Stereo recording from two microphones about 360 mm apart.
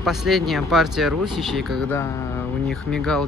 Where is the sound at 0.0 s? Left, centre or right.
Centre.